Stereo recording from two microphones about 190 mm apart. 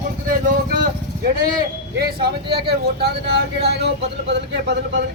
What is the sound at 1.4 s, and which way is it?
Speech, 50° right (ahead or behind).